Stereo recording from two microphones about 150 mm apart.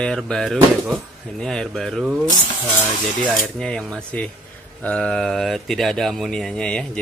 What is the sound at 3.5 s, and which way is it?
Speech, 5° left (ahead or behind).